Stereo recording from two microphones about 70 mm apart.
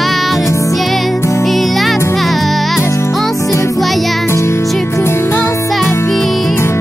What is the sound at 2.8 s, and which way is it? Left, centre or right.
Music, left.